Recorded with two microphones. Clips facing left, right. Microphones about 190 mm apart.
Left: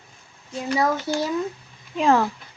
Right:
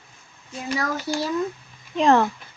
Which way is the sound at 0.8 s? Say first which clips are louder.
Left 4 dB; 20° left (ahead or behind).